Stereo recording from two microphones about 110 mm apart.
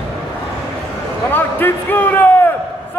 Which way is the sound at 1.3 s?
20° left (ahead or behind).